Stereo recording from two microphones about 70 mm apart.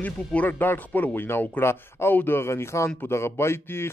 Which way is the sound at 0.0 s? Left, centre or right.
Left.